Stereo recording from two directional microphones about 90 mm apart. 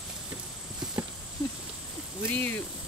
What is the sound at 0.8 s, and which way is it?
Clip-clop, 10° right (ahead or behind).